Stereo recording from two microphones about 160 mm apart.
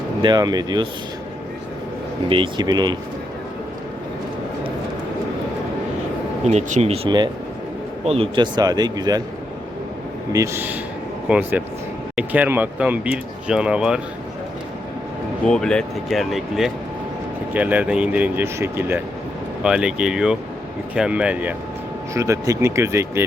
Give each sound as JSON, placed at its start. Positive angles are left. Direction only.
{"t": 0.2, "sound": "a man's voice", "side_deg": -25}
{"t": 2.3, "sound": "a man's voice", "side_deg": -30}
{"t": 6.4, "sound": "a man's voice", "side_deg": -45}
{"t": 10.3, "sound": "speech", "side_deg": -15}
{"t": 15.4, "sound": "speech", "side_deg": 5}
{"t": 22.1, "sound": "speech", "side_deg": -20}